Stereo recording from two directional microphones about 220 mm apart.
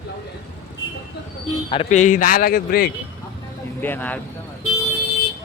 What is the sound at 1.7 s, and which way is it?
A man's voice, 30° left (ahead or behind).